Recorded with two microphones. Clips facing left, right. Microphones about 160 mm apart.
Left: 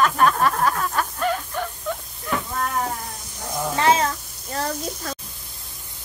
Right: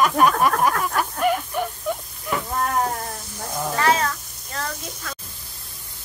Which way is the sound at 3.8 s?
25° left (ahead or behind).